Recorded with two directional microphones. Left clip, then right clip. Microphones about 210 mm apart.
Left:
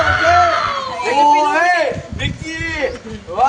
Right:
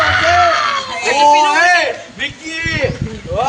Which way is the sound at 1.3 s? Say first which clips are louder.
Right 4 dB; 35° left (ahead or behind).